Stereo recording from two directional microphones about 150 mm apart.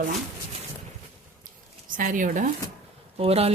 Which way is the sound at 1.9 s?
65° right (ahead or behind).